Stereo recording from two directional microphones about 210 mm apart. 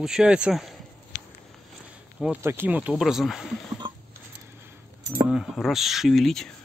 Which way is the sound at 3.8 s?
25° right (ahead or behind).